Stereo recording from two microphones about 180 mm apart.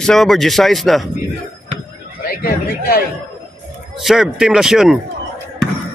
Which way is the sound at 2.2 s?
55° left (ahead or behind).